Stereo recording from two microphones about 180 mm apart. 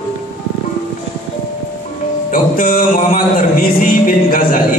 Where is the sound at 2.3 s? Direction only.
50° left (ahead or behind).